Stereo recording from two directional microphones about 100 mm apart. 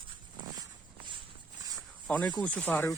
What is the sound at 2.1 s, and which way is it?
Speech, 10° left (ahead or behind).